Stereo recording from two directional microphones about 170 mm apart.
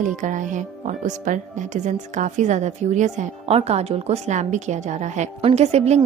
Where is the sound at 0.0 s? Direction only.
50° right (ahead or behind).